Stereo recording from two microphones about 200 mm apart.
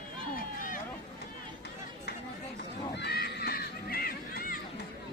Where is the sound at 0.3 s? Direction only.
45° left (ahead or behind).